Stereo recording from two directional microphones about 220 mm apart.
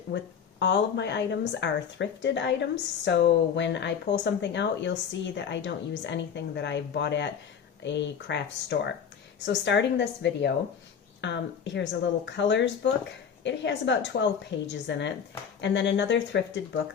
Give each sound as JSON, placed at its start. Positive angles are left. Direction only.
{"t": 0.1, "sound": "speech", "side_deg": 50}